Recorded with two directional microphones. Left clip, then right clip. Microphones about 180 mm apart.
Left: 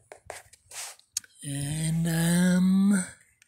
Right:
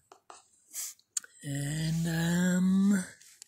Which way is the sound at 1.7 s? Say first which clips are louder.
Left 4 dB; 30° left (ahead or behind).